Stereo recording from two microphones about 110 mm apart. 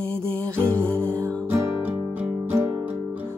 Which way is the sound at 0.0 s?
10° left (ahead or behind).